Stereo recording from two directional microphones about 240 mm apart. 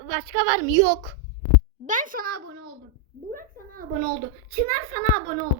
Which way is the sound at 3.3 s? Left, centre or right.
Right.